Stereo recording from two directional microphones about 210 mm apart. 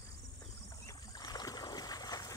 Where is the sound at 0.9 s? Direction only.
15° left (ahead or behind).